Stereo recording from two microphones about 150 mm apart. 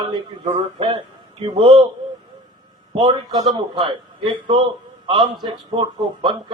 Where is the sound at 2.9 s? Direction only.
35° right (ahead or behind).